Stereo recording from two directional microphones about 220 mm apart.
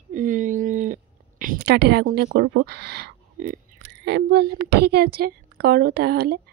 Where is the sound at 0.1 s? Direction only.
35° right (ahead or behind).